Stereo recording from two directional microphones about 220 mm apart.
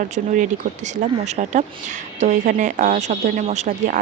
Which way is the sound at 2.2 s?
35° right (ahead or behind).